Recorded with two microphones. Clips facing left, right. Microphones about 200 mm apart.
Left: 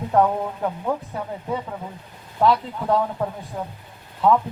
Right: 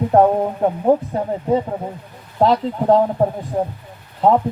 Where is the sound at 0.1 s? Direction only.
35° right (ahead or behind).